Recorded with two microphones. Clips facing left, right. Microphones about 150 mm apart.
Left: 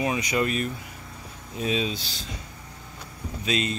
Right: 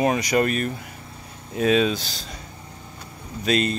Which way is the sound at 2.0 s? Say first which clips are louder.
Right 2 dB; 40° right (ahead or behind).